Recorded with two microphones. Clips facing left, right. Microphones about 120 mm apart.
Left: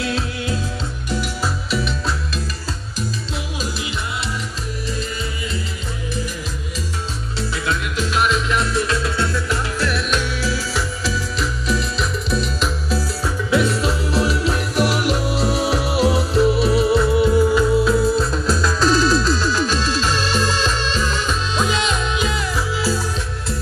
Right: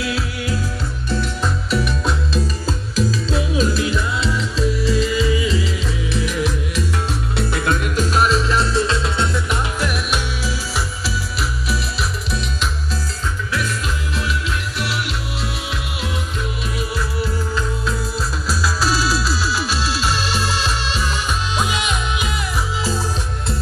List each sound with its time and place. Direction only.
0.0 s music: 25° left (ahead or behind)
1.7 s music: centre (ahead or behind)
4.6 s music: 90° right
6.1 s music: 75° right (ahead or behind)
7.3 s music: 55° right (ahead or behind); by 13.0 s centre (ahead or behind)
13.5 s music: 25° left (ahead or behind)
17.6 s music: centre (ahead or behind); by 22.9 s 20° right (ahead or behind)